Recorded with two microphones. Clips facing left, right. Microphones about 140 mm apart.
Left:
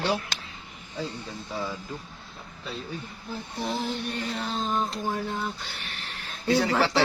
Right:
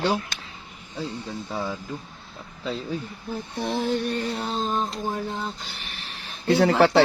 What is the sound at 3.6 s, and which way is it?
Music, 45° right (ahead or behind).